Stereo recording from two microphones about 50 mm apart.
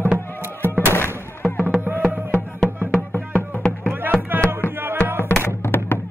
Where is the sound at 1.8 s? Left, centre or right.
Right.